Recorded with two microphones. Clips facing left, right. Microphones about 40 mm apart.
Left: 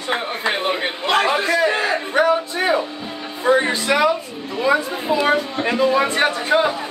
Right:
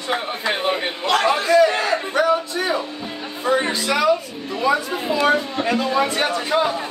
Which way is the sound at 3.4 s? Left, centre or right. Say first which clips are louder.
Left 3 dB; left.